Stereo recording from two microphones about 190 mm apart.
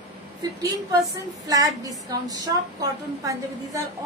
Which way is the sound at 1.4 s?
20° right (ahead or behind).